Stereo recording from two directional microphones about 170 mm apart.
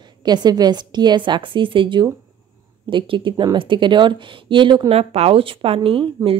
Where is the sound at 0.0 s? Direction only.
25° right (ahead or behind).